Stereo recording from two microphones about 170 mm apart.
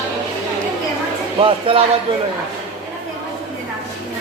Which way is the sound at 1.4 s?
30° right (ahead or behind).